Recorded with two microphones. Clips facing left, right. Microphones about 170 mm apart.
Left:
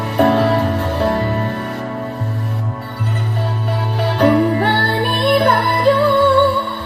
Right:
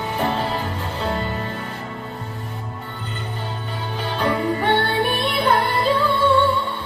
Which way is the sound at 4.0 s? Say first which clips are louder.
Left 9 dB; 70° left (ahead or behind).